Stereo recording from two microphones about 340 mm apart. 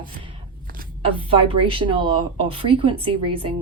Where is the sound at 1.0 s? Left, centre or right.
Centre.